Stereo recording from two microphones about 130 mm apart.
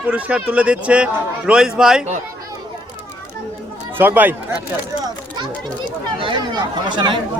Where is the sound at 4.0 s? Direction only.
15° right (ahead or behind).